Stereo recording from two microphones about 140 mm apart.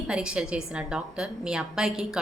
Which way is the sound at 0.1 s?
5° right (ahead or behind).